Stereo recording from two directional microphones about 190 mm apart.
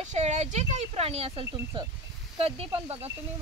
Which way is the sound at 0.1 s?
35° right (ahead or behind).